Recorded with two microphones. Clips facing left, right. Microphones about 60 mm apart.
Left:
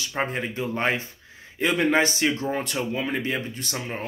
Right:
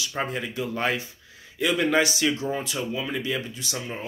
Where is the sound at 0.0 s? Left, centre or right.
Left.